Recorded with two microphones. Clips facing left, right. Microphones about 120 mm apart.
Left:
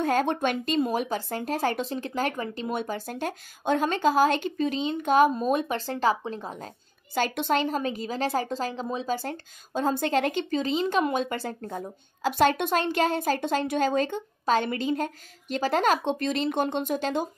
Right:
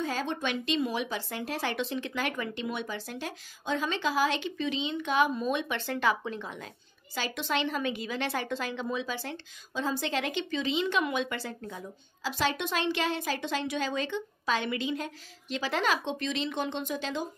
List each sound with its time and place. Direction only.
0.0 s a woman's voice: 55° left (ahead or behind); by 6.7 s 40° left (ahead or behind)
7.2 s a woman's voice: 50° left (ahead or behind)